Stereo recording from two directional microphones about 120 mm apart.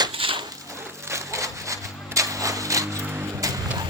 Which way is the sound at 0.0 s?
45° right (ahead or behind).